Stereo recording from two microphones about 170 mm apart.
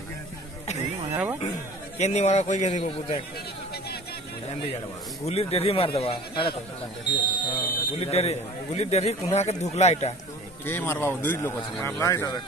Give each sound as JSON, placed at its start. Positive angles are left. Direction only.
{"t": 1.1, "sound": "speech", "side_deg": -10}
{"t": 2.0, "sound": "speech", "side_deg": 40}
{"t": 5.2, "sound": "speech", "side_deg": 35}
{"t": 10.6, "sound": "speech", "side_deg": 10}